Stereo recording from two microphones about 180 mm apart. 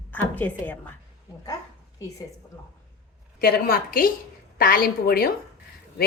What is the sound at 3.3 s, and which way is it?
A woman's voice, 55° left (ahead or behind).